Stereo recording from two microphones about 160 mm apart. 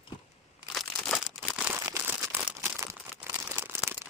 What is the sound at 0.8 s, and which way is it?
Crumpling, centre (ahead or behind).